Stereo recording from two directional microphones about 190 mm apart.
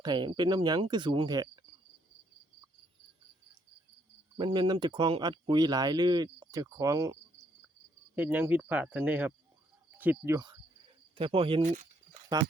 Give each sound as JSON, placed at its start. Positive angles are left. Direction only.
{"t": 0.0, "sound": "speech", "side_deg": -25}
{"t": 4.4, "sound": "speech", "side_deg": -25}
{"t": 11.6, "sound": "speech", "side_deg": -40}
{"t": 12.3, "sound": "speech", "side_deg": -20}